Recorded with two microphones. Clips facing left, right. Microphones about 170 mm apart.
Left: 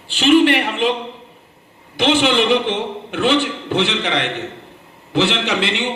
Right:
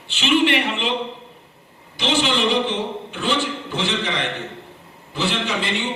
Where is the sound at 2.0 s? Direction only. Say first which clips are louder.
Left 5 dB; 60° left (ahead or behind).